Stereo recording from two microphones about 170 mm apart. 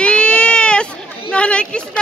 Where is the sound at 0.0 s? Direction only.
5° left (ahead or behind).